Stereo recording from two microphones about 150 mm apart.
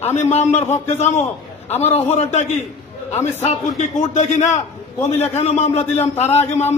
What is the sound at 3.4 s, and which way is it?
A man's voice, 50° left (ahead or behind).